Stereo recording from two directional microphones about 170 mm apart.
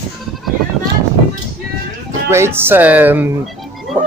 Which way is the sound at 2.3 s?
15° right (ahead or behind).